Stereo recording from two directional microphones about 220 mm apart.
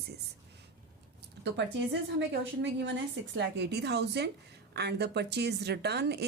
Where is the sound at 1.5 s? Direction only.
55° right (ahead or behind).